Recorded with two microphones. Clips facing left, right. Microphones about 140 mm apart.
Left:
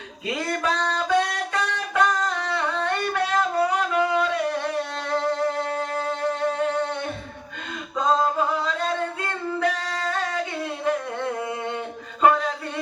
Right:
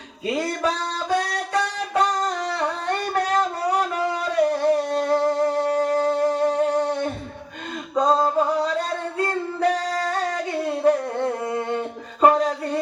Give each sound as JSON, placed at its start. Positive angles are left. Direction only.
{"t": 0.3, "sound": "music", "side_deg": -35}
{"t": 1.9, "sound": "singing", "side_deg": -35}